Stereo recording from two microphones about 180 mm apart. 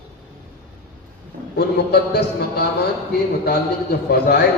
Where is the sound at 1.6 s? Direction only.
65° left (ahead or behind).